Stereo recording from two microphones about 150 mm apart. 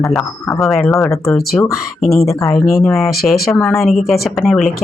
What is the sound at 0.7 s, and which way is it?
Speech, 15° left (ahead or behind).